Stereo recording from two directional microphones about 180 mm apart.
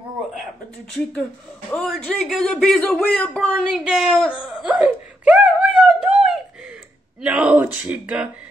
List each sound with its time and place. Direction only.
1.7 s a man's voice: centre (ahead or behind)
4.4 s wail: centre (ahead or behind)
7.2 s speech: 5° right (ahead or behind)